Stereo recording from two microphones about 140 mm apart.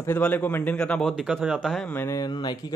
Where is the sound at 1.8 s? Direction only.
15° left (ahead or behind).